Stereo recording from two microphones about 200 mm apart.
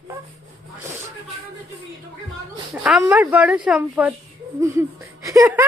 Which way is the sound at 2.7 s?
5° right (ahead or behind).